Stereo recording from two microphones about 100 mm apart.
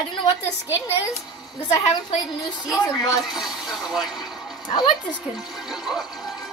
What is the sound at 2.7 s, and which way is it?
Speech, 40° left (ahead or behind).